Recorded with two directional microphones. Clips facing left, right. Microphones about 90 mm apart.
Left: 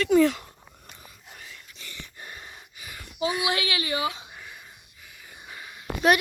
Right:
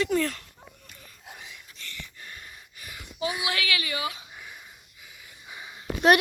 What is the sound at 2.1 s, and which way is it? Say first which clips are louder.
Gasp: left 2 dB; 25° left (ahead or behind).